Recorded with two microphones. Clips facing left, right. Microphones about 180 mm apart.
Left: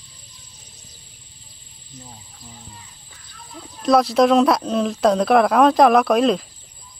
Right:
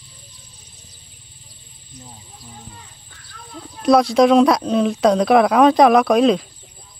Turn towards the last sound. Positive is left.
turn(degrees=0)  # may be behind; listen again after turning